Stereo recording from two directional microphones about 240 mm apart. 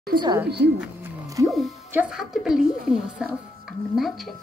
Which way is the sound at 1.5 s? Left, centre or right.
Centre.